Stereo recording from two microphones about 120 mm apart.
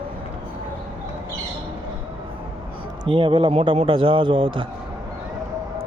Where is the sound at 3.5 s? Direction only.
55° right (ahead or behind).